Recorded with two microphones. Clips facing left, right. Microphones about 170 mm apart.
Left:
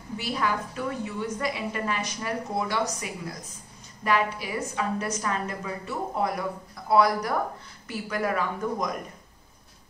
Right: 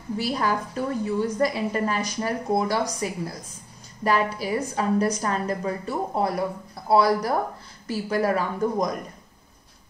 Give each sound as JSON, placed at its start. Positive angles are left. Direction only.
{"t": 0.2, "sound": "a woman's voice", "side_deg": -40}